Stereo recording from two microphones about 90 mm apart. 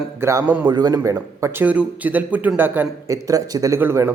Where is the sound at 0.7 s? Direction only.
50° right (ahead or behind).